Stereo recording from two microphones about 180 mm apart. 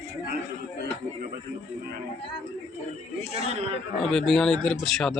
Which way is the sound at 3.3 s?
35° right (ahead or behind).